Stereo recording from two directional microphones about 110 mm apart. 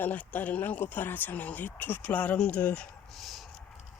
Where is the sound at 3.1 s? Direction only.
Centre (ahead or behind).